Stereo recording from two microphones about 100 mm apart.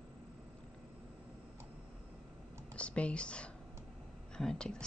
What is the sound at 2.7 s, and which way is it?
A woman's voice, 10° left (ahead or behind).